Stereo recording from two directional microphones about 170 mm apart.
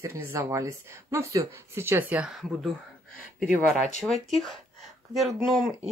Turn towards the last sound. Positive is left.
turn(degrees=0)  # may be behind; listen again after turning